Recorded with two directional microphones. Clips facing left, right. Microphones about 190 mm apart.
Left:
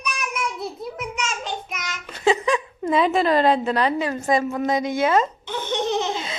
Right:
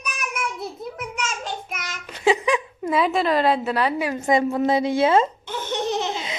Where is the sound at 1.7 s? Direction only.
10° right (ahead or behind).